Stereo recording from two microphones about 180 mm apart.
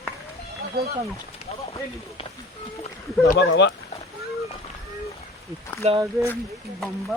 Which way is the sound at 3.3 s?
70° left (ahead or behind).